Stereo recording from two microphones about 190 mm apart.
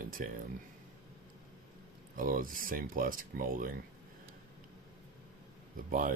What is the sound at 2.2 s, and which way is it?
Speech, 45° right (ahead or behind).